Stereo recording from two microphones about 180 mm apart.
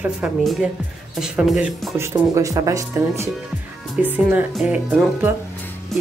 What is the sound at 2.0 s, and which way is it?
A woman's voice, 15° right (ahead or behind).